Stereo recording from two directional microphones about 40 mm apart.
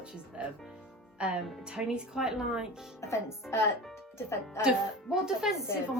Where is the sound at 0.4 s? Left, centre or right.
Right.